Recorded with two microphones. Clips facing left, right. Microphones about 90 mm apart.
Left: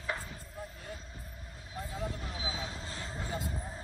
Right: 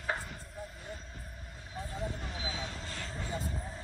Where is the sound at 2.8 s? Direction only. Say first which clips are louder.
Even; 35° left (ahead or behind).